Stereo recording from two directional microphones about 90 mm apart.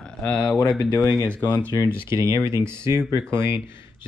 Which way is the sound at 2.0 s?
35° right (ahead or behind).